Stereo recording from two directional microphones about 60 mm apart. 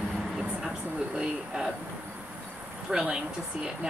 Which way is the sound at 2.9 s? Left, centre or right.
Centre.